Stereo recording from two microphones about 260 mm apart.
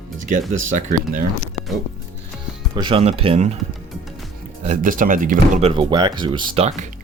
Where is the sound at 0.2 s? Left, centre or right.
Right.